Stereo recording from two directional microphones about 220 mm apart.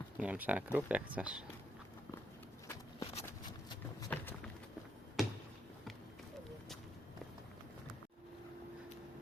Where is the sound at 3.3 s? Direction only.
15° left (ahead or behind).